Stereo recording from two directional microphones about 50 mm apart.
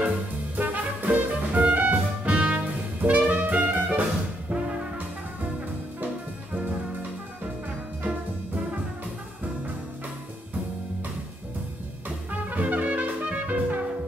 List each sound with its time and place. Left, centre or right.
0.6 s music: right
4.5 s brass instrument: right
12.3 s trumpet: right